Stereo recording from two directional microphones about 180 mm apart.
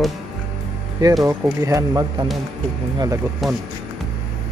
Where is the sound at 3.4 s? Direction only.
Centre (ahead or behind).